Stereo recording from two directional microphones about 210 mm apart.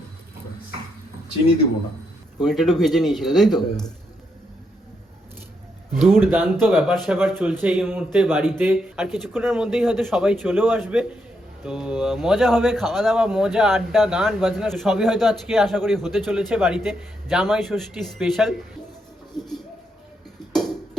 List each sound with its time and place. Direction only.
2.4 s speech: centre (ahead or behind)
5.9 s speech: centre (ahead or behind)
6.3 s speech: 10° right (ahead or behind)
20.4 s a sound: 20° left (ahead or behind)